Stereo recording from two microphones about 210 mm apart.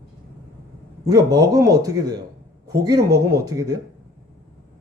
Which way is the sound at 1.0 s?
15° right (ahead or behind).